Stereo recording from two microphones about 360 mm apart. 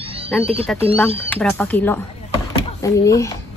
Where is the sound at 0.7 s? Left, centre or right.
Centre.